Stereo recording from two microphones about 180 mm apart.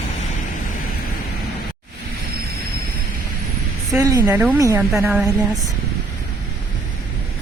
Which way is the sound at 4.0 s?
15° right (ahead or behind).